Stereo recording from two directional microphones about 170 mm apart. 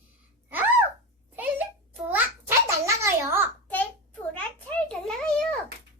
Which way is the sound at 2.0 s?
15° right (ahead or behind).